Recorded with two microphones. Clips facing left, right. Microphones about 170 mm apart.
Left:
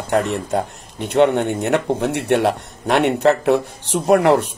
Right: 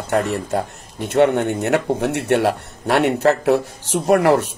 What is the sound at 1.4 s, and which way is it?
Speech, centre (ahead or behind).